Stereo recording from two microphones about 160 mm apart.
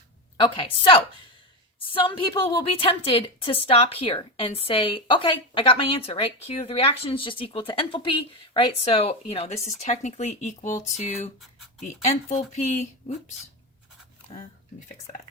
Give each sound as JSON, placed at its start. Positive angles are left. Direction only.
{"t": 0.3, "sound": "a woman's voice", "side_deg": 30}